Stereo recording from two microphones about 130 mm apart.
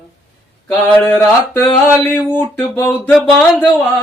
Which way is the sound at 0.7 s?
15° left (ahead or behind).